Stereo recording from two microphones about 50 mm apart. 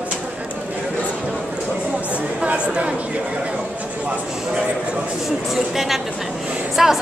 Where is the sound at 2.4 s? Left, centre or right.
Right.